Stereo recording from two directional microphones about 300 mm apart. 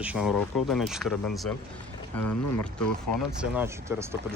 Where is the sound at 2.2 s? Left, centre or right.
Left.